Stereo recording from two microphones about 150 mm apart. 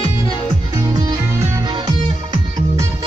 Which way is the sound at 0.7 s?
25° right (ahead or behind).